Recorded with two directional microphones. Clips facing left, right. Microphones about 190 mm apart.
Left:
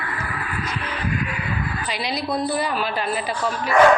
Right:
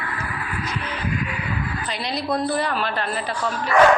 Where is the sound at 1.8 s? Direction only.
10° left (ahead or behind).